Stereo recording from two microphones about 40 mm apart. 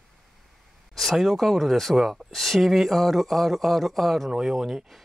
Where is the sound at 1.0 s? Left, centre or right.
Centre.